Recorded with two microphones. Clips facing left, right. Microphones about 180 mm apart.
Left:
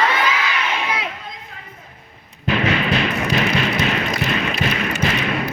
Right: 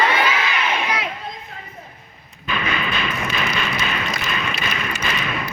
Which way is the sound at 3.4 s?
70° left (ahead or behind).